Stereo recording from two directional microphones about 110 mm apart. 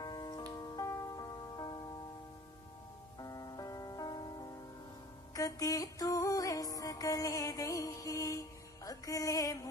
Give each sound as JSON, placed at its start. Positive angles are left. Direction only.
{"t": 0.0, "sound": "music", "side_deg": 40}
{"t": 3.2, "sound": "music", "side_deg": 35}